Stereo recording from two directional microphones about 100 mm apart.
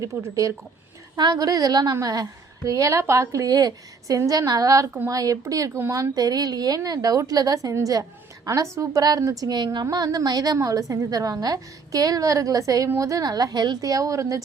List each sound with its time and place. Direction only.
0.0 s a woman's voice: 30° right (ahead or behind)